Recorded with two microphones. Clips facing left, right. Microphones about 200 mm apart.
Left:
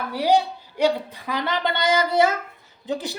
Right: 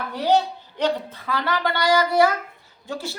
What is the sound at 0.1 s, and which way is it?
A woman's voice, 10° left (ahead or behind).